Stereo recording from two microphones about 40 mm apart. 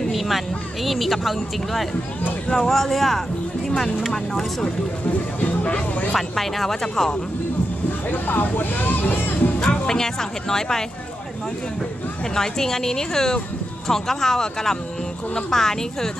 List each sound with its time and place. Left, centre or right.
0.8 s speech: centre
5.4 s speech: left
6.1 s speech: centre
8.1 s speech: left
9.6 s speech: centre
12.4 s speech: centre